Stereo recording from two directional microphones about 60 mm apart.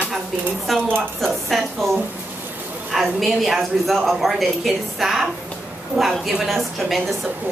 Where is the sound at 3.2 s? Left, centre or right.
Centre.